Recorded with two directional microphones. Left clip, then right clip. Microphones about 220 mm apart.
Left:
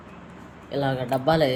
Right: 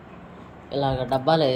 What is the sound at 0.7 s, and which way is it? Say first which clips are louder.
Speech: right 1 dB; 10° left (ahead or behind).